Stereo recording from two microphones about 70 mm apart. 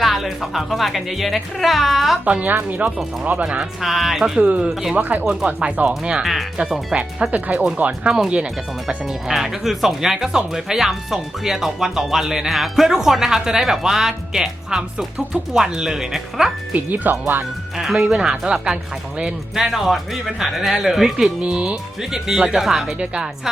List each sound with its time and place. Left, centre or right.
0.0 s speech: centre
2.2 s speech: right
3.8 s speech: centre
4.4 s speech: centre
4.7 s speech: centre
4.9 s speech: right
5.2 s speech: centre
6.9 s speech: centre
16.7 s speech: right
17.7 s speech: centre
21.4 s speech: centre